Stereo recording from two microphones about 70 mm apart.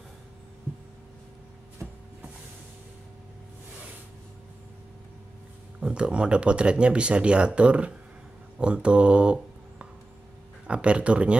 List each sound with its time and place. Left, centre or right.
5.8 s speech: centre